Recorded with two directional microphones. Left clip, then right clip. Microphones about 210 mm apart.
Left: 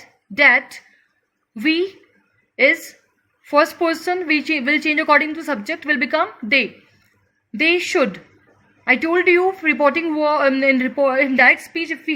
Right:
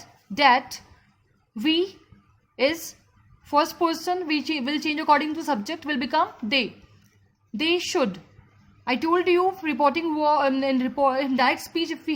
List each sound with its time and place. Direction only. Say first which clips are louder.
0.3 s speech: left 5 dB; 20° right (ahead or behind)
3.4 s speech: left 6 dB; 20° right (ahead or behind)